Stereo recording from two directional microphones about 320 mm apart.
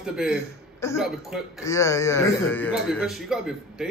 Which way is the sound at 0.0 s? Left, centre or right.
Centre.